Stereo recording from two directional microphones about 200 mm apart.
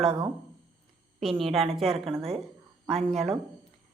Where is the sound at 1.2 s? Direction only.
Centre (ahead or behind).